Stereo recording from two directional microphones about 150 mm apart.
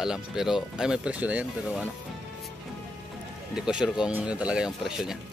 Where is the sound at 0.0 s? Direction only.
5° right (ahead or behind).